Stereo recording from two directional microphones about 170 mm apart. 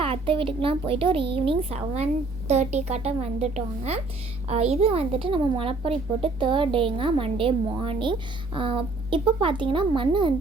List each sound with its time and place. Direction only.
0.0 s a woman's voice: 30° right (ahead or behind)